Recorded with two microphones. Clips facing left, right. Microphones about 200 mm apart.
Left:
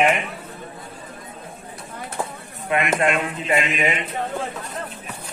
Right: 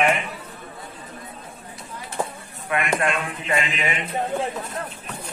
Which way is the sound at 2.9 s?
20° left (ahead or behind).